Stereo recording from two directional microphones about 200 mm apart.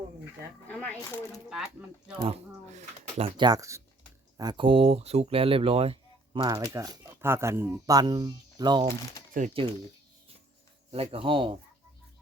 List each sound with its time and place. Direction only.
0.7 s speech: 10° left (ahead or behind)
2.2 s speech: 30° right (ahead or behind)
9.4 s speech: 40° right (ahead or behind)
10.9 s speech: 30° right (ahead or behind)